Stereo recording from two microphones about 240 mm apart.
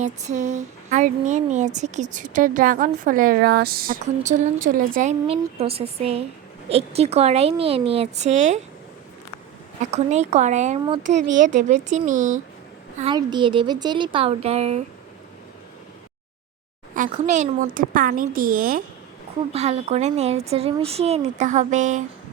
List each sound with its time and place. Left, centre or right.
0.0 s a woman's voice: right
9.8 s a woman's voice: right
13.0 s a woman's voice: centre
16.9 s a woman's voice: right